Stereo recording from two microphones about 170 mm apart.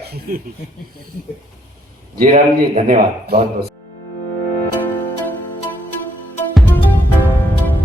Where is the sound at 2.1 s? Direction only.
60° right (ahead or behind).